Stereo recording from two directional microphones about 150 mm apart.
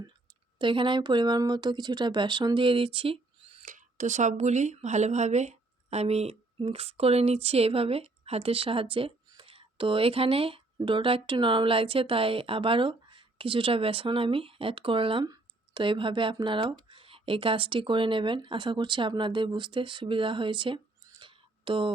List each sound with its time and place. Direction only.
0.6 s speech: 35° right (ahead or behind)
3.7 s speech: 55° right (ahead or behind); by 21.9 s 35° right (ahead or behind)